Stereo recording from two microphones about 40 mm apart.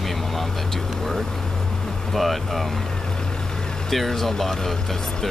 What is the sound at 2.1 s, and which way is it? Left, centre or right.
Speech, centre.